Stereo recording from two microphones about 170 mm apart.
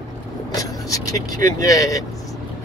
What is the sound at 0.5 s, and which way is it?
Speech, 20° left (ahead or behind).